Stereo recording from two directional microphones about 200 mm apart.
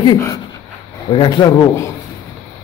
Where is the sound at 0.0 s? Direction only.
20° left (ahead or behind).